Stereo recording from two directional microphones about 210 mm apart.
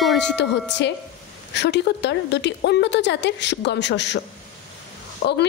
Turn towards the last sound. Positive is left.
turn(degrees=55)  # may be behind; listen again after turning